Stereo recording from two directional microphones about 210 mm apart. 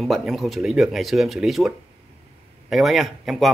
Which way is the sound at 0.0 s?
Centre (ahead or behind).